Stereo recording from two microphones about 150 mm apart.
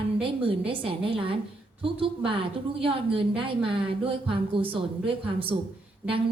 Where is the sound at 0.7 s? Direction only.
35° right (ahead or behind).